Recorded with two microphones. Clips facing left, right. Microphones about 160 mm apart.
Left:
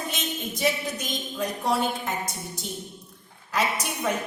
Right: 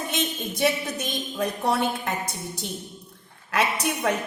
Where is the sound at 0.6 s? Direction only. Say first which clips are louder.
Right 3 dB; 60° right (ahead or behind).